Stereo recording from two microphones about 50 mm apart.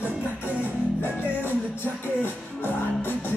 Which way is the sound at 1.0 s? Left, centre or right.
Left.